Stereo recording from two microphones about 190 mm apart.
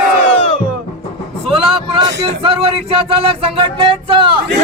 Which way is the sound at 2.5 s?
30° right (ahead or behind).